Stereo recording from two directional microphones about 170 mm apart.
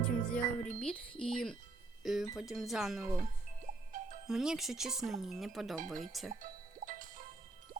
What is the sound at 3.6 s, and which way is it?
Music, 50° right (ahead or behind).